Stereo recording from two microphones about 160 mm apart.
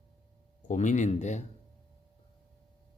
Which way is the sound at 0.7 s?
50° left (ahead or behind).